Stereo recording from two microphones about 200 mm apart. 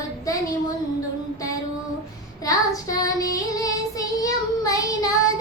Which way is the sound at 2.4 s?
15° left (ahead or behind).